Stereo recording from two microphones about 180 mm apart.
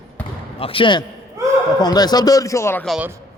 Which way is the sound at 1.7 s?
20° left (ahead or behind).